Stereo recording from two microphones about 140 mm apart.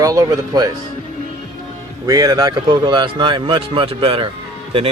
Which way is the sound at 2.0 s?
25° right (ahead or behind).